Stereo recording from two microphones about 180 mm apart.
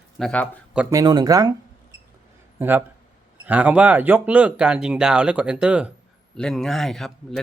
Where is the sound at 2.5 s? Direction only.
10° right (ahead or behind).